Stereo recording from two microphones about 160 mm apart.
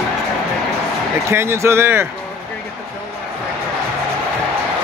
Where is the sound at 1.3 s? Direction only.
15° right (ahead or behind).